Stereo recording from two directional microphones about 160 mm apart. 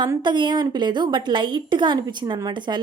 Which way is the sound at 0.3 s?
30° right (ahead or behind).